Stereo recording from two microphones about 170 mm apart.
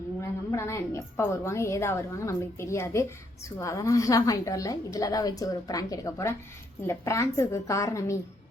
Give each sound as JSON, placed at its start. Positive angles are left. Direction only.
{"t": 0.2, "sound": "a woman's voice", "side_deg": 15}